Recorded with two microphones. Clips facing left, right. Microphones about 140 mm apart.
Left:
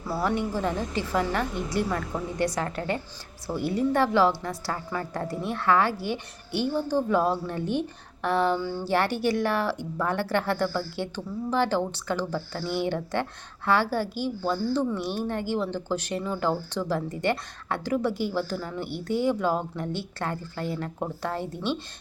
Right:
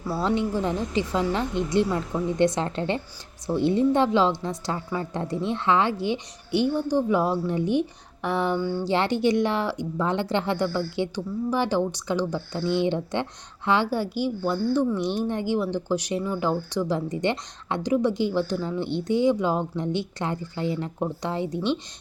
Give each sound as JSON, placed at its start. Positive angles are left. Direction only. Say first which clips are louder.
{"t": 0.1, "sound": "a woman's voice", "louder": "right 2 dB", "side_deg": -20}